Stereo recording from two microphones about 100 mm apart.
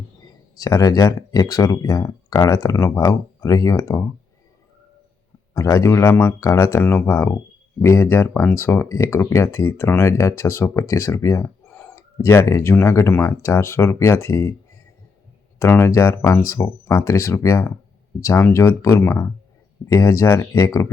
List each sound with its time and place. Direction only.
0.6 s speech: 35° left (ahead or behind)
5.5 s speech: 30° left (ahead or behind)
11.7 s a sound: 15° left (ahead or behind)
11.9 s speech: 25° left (ahead or behind)
15.5 s speech: 25° left (ahead or behind)